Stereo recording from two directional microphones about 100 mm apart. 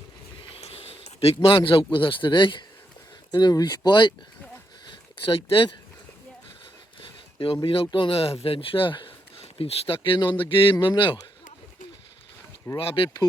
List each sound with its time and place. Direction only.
0.6 s speech: 70° left (ahead or behind); by 2.6 s 55° left (ahead or behind)
3.3 s speech: 45° left (ahead or behind)
4.9 s a sound: 60° left (ahead or behind)
7.0 s a sound: 60° left (ahead or behind)
7.9 s speech: 60° left (ahead or behind)
9.4 s speech: 70° left (ahead or behind); by 11.2 s 55° left (ahead or behind)
12.7 s speech: 65° left (ahead or behind)